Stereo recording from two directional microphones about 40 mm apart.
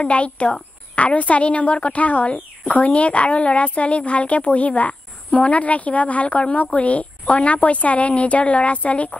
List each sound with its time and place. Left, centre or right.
0.0 s a woman's voice: left